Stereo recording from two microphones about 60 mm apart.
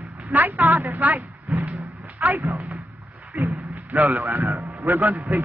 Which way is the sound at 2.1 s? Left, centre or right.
Right.